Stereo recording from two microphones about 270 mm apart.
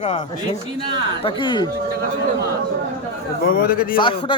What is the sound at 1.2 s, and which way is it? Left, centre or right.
Speech, centre.